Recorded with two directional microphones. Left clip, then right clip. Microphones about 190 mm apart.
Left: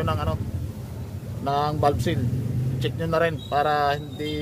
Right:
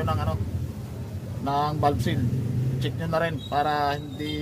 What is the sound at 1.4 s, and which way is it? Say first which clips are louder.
A man's voice: left 1 dB; 35° left (ahead or behind).